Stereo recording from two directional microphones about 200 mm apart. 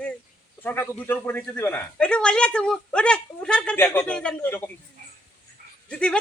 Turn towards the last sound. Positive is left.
turn(degrees=5)  # may be behind; listen again after turning